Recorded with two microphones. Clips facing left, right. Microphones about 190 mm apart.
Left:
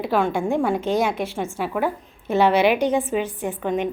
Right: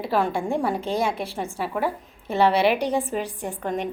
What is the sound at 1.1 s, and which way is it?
Speech, 30° right (ahead or behind).